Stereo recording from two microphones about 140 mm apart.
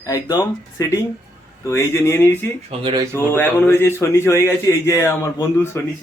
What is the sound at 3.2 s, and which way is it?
A man's voice, 15° left (ahead or behind).